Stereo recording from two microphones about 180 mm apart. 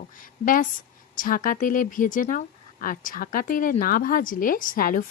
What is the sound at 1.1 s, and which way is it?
Speech, 50° left (ahead or behind).